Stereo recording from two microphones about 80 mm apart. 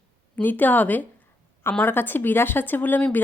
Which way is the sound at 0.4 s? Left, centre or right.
Left.